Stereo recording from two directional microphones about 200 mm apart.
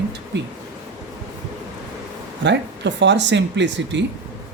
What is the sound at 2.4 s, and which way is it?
Speech, 60° right (ahead or behind).